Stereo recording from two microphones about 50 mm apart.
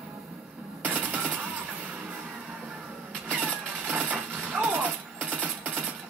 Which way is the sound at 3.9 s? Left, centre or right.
Right.